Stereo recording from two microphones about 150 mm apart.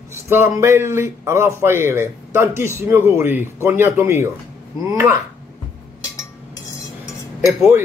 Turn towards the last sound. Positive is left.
turn(degrees=-10)  # may be behind; listen again after turning